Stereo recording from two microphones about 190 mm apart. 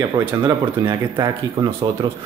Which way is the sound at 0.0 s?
20° right (ahead or behind).